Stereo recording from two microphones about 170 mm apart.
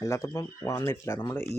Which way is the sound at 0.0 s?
20° left (ahead or behind).